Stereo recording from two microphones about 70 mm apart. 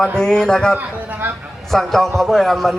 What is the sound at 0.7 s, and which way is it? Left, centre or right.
Speech, right.